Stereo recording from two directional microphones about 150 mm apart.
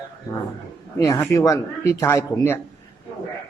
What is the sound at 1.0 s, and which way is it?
Speech, 20° left (ahead or behind).